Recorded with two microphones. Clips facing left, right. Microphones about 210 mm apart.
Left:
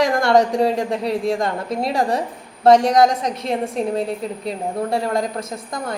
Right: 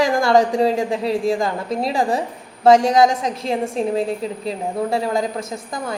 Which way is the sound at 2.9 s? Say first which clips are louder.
Even; 25° right (ahead or behind).